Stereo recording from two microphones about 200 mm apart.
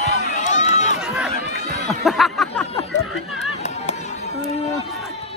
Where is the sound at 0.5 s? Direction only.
35° left (ahead or behind).